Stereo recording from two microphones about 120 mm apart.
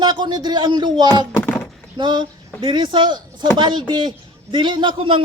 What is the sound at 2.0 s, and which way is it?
A man's voice, 40° right (ahead or behind).